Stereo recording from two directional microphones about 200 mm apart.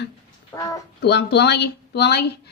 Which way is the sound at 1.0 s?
55° left (ahead or behind).